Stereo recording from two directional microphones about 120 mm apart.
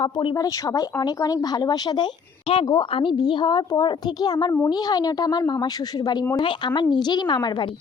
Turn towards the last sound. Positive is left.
turn(degrees=35)  # may be behind; listen again after turning